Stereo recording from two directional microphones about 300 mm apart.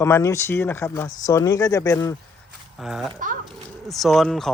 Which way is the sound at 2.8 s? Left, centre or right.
Centre.